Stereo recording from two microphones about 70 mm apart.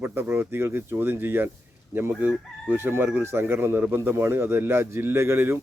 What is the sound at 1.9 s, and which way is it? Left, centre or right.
Fowl, right.